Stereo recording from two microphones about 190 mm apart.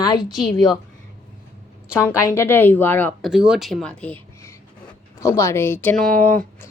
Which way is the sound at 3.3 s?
5° right (ahead or behind).